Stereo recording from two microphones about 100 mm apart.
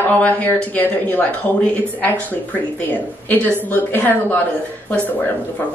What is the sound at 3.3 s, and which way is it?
Speech, 20° left (ahead or behind).